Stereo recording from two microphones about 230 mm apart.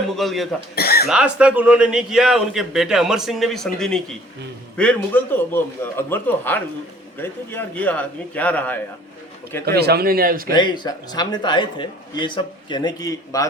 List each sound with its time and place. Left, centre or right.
0.2 s a man's voice: centre
0.8 s cough: left
1.0 s a man's voice: centre
9.6 s a man's voice: right
10.5 s a man's voice: centre